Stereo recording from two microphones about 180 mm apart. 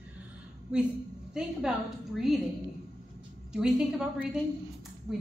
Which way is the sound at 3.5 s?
5° right (ahead or behind).